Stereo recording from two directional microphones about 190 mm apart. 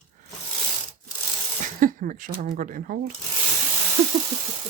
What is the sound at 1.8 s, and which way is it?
Speech, 45° right (ahead or behind).